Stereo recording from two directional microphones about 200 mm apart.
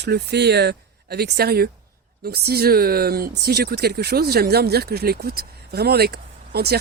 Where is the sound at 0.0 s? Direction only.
55° right (ahead or behind).